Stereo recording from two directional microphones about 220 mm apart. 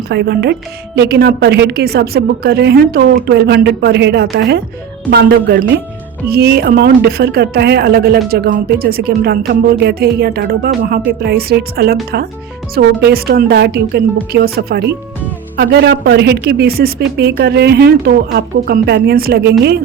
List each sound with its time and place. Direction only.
0.1 s a woman's voice: 50° right (ahead or behind)